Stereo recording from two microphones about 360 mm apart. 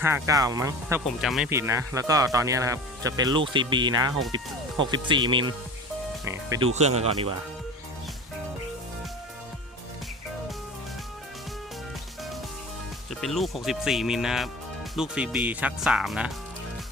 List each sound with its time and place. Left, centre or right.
0.0 s speech: centre
13.1 s speech: centre